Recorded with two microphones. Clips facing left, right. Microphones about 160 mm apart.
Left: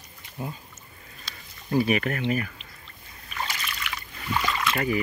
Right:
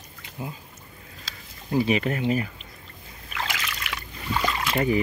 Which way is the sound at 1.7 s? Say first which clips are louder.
Right 1 dB; 20° right (ahead or behind).